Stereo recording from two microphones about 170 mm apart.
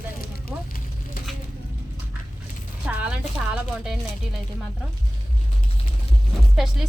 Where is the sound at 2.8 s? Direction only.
10° right (ahead or behind).